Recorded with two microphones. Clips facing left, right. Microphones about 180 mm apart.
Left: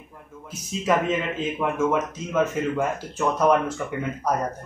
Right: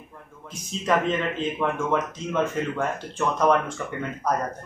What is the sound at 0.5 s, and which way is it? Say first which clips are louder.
A man's voice: left 1 dB; 5° left (ahead or behind).